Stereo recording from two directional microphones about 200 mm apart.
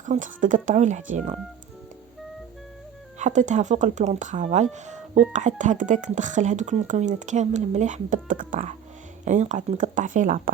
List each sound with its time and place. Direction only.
0.0 s speech: 40° right (ahead or behind)
3.2 s speech: 35° right (ahead or behind)